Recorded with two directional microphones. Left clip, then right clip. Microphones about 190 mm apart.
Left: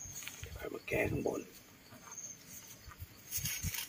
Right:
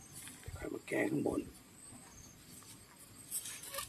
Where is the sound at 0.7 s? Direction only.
25° right (ahead or behind).